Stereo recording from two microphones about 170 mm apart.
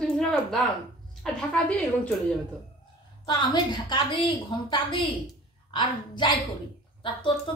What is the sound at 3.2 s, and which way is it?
A woman's voice, 25° left (ahead or behind).